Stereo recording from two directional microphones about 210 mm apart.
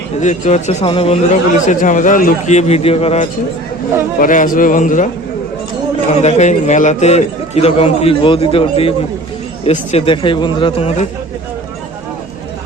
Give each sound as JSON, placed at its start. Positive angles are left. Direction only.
{"t": 0.2, "sound": "a man's voice", "side_deg": 35}
{"t": 4.2, "sound": "a man's voice", "side_deg": 40}
{"t": 6.2, "sound": "a man's voice", "side_deg": 30}